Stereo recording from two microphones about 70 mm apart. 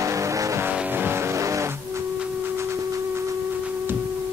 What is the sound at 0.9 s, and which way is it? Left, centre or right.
Music, right.